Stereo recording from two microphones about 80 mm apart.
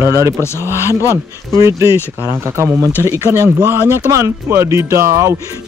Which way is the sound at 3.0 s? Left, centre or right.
Right.